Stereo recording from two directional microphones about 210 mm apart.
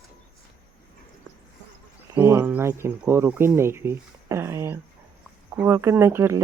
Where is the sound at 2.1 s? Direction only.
10° right (ahead or behind).